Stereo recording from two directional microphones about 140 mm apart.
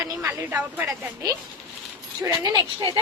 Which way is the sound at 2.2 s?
25° right (ahead or behind).